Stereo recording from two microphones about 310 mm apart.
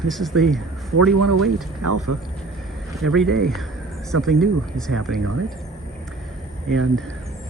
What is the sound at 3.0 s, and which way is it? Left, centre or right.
Speech, centre.